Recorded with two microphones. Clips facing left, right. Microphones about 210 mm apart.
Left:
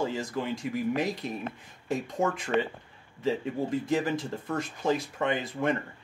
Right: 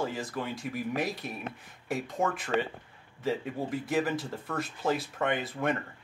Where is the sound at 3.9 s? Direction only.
15° left (ahead or behind).